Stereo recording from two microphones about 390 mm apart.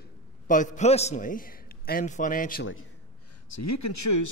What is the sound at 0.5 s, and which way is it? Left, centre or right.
A man's voice, centre.